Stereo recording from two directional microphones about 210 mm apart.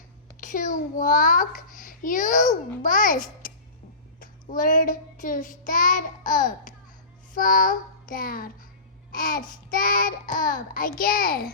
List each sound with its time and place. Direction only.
0.3 s a child's voice: 40° left (ahead or behind)
4.2 s child singing: 40° left (ahead or behind)
7.3 s a child's voice: 40° left (ahead or behind)